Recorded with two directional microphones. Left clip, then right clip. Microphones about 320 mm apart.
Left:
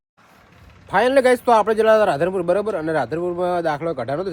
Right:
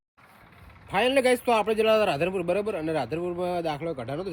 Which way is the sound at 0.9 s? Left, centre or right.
Centre.